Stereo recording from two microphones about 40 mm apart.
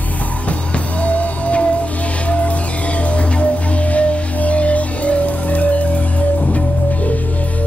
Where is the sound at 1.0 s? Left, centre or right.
Left.